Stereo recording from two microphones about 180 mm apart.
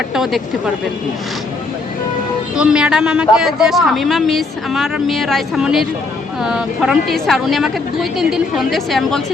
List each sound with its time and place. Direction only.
0.1 s speech: centre (ahead or behind)
2.6 s speech: 5° right (ahead or behind)